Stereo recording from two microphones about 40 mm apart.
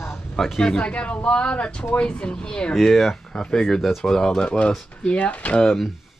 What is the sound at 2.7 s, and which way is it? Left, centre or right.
Speech, centre.